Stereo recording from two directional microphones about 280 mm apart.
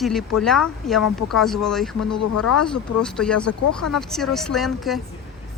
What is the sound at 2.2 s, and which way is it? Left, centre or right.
Speech, left.